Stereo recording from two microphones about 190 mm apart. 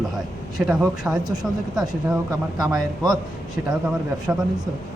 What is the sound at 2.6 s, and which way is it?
Speech, centre (ahead or behind).